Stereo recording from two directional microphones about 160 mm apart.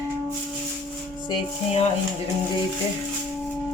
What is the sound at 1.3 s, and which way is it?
Speech, 40° left (ahead or behind).